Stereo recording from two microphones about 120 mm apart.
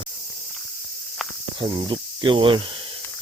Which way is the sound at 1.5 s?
40° right (ahead or behind).